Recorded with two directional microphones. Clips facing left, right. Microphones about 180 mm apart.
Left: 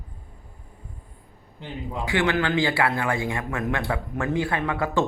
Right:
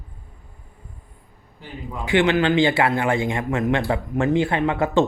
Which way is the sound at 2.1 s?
20° right (ahead or behind).